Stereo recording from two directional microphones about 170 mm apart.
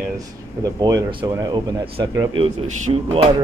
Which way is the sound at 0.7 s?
20° right (ahead or behind).